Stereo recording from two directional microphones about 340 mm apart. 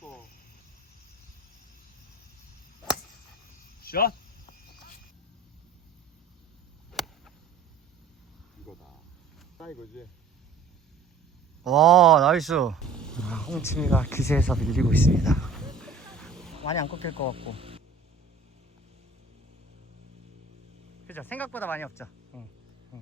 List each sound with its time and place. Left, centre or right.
3.8 s cricket: left
6.9 s a sound: centre
8.7 s a sound: centre
9.6 s speech: centre
11.6 s speech: centre
16.6 s speech: centre
21.1 s speech: centre